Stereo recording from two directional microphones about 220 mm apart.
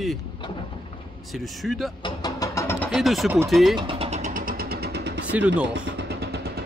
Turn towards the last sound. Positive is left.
turn(degrees=-45)  # may be behind; listen again after turning